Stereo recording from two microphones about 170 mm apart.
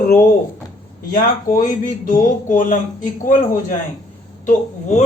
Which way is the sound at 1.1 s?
50° left (ahead or behind).